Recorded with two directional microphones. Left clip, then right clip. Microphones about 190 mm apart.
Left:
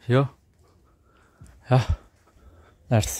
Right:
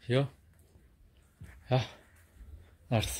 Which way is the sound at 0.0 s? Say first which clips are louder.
Left 8 dB; 50° left (ahead or behind).